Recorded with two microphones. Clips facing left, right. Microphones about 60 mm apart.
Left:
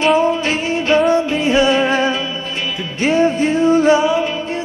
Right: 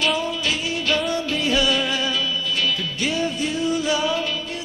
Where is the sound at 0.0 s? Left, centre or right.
Left.